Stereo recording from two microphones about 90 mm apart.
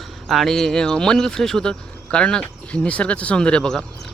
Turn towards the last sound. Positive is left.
turn(degrees=10)  # may be behind; listen again after turning